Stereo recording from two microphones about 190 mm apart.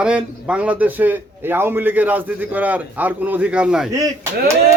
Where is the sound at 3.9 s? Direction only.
15° right (ahead or behind).